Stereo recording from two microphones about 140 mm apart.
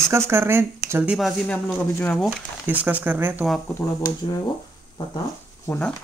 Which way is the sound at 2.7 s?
10° right (ahead or behind).